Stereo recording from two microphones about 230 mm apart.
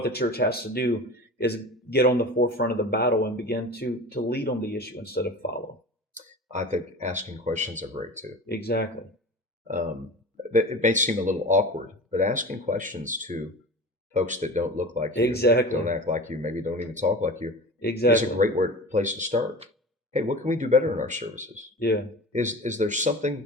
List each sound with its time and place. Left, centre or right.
0.0 s speech: left
6.1 s speech: right
8.4 s speech: left
10.5 s speech: right
15.1 s speech: left
15.7 s speech: right
17.8 s speech: left
18.1 s speech: right
21.8 s speech: left
22.3 s speech: right